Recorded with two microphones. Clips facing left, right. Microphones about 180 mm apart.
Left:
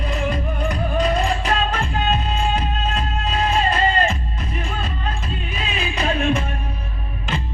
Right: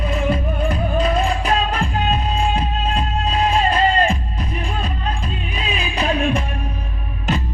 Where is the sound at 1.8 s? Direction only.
35° right (ahead or behind).